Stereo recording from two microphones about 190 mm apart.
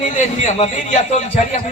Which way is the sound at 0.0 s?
40° left (ahead or behind).